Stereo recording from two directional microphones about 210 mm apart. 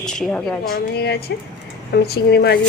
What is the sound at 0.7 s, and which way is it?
A woman's voice, 50° left (ahead or behind).